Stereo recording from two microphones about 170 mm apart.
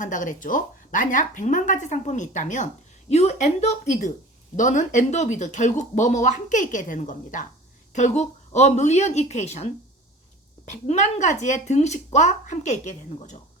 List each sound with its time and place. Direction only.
0.0 s a woman's voice: 50° left (ahead or behind)